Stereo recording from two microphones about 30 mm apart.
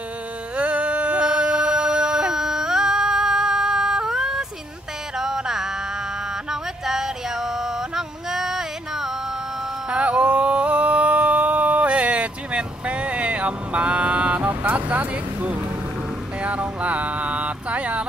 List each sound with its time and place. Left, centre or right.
0.6 s a sound: right
1.2 s a sound: right
2.3 s yodeling: centre
5.1 s music: centre
9.8 s music: right
11.9 s vehicle: right
14.7 s speech: right
16.4 s music: right